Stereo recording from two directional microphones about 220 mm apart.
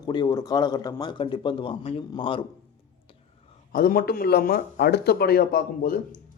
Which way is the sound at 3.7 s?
40° left (ahead or behind).